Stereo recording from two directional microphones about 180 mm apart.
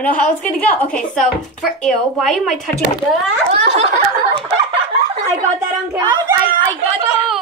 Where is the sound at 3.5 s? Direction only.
35° right (ahead or behind).